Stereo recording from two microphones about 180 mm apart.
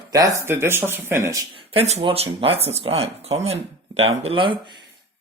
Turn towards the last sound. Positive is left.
turn(degrees=-30)  # may be behind; listen again after turning